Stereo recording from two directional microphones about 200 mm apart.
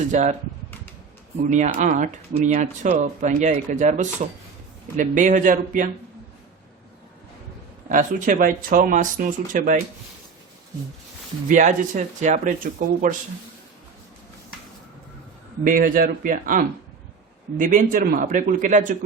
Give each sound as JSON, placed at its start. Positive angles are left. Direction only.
{"t": 0.1, "sound": "speech", "side_deg": -35}
{"t": 1.5, "sound": "speech", "side_deg": -35}
{"t": 7.9, "sound": "speech", "side_deg": -40}
{"t": 11.4, "sound": "speech", "side_deg": -40}
{"t": 15.6, "sound": "speech", "side_deg": -45}